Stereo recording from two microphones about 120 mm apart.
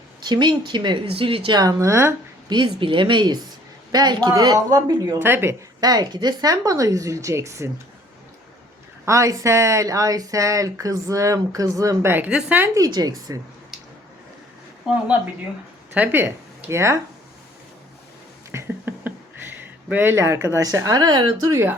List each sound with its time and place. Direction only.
0.2 s speech: 40° right (ahead or behind); by 2.1 s 25° right (ahead or behind)
2.5 s speech: 40° right (ahead or behind)
5.2 s speech: 20° right (ahead or behind)
5.8 s speech: 35° right (ahead or behind)
9.0 s speech: 25° right (ahead or behind)
12.1 s speech: 10° right (ahead or behind)
12.7 s speech: 30° right (ahead or behind)
16.0 s speech: 15° right (ahead or behind)
18.5 s a sound: 15° right (ahead or behind)
19.5 s speech: 15° right (ahead or behind); by 21.5 s 40° right (ahead or behind)
21.5 s speech: 20° right (ahead or behind)